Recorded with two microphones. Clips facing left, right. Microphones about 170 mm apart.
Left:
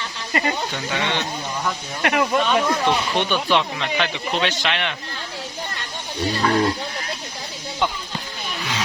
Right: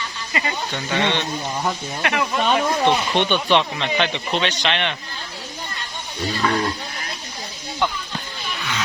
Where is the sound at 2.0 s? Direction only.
45° left (ahead or behind).